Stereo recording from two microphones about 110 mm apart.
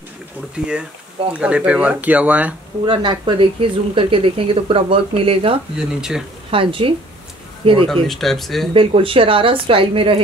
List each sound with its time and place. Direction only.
0.6 s speech: 10° right (ahead or behind)
2.8 s speech: 45° right (ahead or behind)
5.8 s speech: 5° right (ahead or behind)
6.5 s speech: 55° right (ahead or behind)
7.9 s speech: centre (ahead or behind)
8.7 s speech: 55° right (ahead or behind)